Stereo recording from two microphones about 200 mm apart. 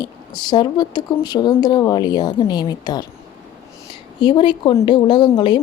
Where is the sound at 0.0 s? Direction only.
20° left (ahead or behind).